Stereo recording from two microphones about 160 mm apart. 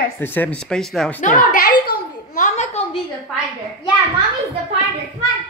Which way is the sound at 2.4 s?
45° left (ahead or behind).